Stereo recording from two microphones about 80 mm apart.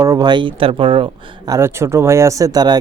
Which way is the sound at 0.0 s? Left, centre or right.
Right.